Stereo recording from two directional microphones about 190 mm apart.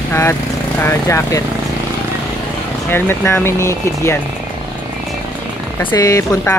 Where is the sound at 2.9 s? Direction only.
10° left (ahead or behind).